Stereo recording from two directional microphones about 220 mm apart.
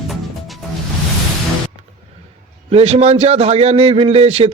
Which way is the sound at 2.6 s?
30° right (ahead or behind).